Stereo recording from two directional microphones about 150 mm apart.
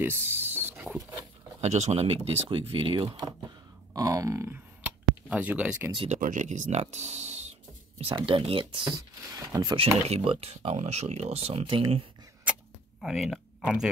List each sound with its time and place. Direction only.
0.0 s music: 15° right (ahead or behind)
1.6 s speech: 50° right (ahead or behind); by 4.6 s 20° right (ahead or behind)
4.8 s a sound: 10° right (ahead or behind)
6.0 s speech: 55° right (ahead or behind); by 9.8 s 25° right (ahead or behind)
9.8 s speech: 40° right (ahead or behind)
13.0 s speech: centre (ahead or behind)